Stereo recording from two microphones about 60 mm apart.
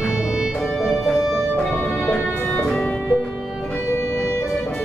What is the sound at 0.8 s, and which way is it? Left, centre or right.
Music, centre.